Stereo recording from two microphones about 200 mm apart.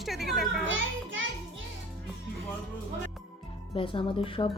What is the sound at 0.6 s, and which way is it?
Speech, 70° right (ahead or behind).